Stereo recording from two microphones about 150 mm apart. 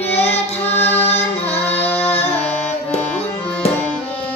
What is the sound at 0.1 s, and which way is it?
Carnatic music, 45° left (ahead or behind).